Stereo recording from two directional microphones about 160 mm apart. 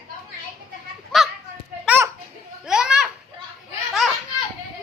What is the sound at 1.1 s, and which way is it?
Children playing, 5° left (ahead or behind).